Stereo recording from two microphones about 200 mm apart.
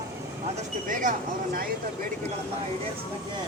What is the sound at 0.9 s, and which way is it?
Speech, 40° right (ahead or behind).